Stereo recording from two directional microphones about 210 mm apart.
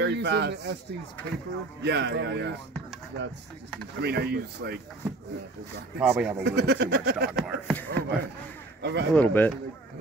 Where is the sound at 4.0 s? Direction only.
50° right (ahead or behind).